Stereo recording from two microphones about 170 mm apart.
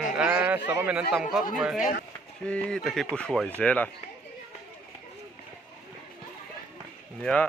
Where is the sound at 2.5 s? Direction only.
5° left (ahead or behind).